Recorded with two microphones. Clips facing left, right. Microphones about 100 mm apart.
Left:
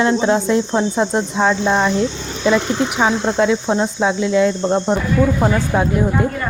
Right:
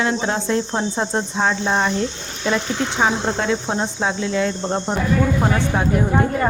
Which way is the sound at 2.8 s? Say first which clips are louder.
Left 4 dB; 25° left (ahead or behind).